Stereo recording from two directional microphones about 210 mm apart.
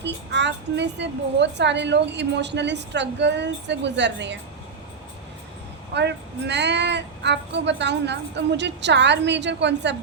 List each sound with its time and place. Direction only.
0.0 s a woman's voice: 55° right (ahead or behind)
5.9 s a woman's voice: 55° right (ahead or behind)